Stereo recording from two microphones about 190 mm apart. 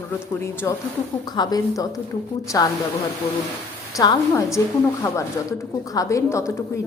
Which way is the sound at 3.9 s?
20° left (ahead or behind).